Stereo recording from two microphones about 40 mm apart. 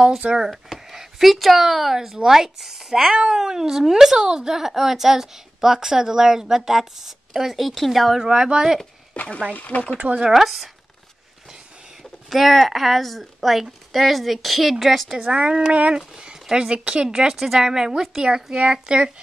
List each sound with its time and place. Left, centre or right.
0.2 s speech: right
0.7 s speech: centre
8.3 s speech: right
9.1 s speech: left
9.9 s speech: right
10.3 s speech: centre
12.0 s speech: centre
15.1 s speech: right
17.4 s speech: centre